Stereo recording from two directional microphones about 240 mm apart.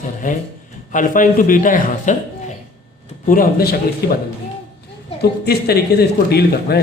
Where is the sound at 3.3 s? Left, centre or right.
Left.